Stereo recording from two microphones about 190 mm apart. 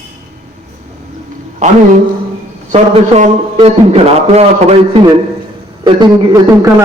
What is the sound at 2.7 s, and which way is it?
A man's voice, 35° right (ahead or behind).